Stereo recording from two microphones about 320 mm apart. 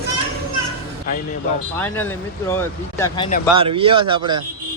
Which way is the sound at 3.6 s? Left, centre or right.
Centre.